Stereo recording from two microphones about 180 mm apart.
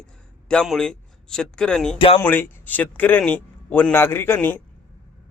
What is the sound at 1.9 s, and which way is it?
Speech, 30° left (ahead or behind).